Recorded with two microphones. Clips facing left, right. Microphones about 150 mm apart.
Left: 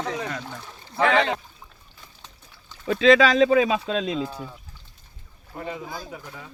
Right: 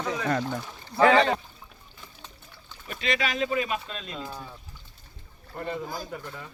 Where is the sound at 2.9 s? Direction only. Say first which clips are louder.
Left 13 dB; 90° left.